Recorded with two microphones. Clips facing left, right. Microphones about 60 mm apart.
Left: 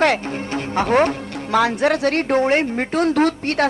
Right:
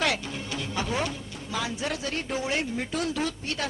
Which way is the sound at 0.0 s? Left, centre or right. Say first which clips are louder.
Left 10 dB; left.